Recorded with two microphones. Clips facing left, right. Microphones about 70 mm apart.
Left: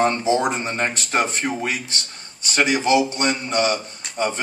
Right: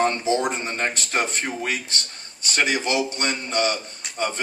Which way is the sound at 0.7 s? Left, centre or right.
Left.